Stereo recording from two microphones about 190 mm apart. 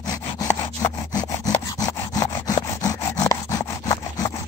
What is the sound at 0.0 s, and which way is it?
Sawing, 20° left (ahead or behind).